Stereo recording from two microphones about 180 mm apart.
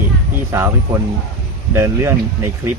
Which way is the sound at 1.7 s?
15° right (ahead or behind).